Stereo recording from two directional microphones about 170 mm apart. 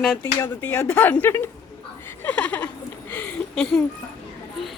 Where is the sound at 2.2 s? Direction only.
10° left (ahead or behind).